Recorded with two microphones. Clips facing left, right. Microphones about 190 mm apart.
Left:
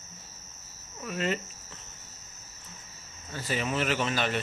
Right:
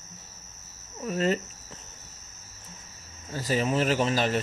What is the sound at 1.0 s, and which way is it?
Speech, 35° right (ahead or behind).